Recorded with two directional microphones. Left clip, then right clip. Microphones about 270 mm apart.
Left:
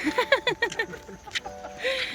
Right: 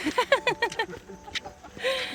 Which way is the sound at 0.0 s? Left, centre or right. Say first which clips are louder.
Even; centre.